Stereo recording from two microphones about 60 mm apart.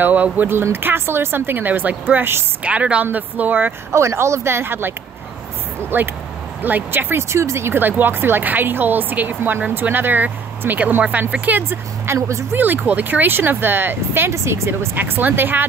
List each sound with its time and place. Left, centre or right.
0.0 s speech: right
0.5 s speech: right
2.6 s speech: right
3.9 s speech: right
5.9 s speech: right
12.2 s speech: right
12.5 s speech: right
14.3 s speech: right
15.0 s speech: right